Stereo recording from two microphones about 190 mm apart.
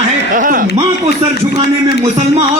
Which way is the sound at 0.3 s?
45° right (ahead or behind).